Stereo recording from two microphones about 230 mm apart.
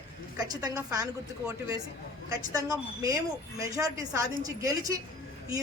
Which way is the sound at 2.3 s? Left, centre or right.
Centre.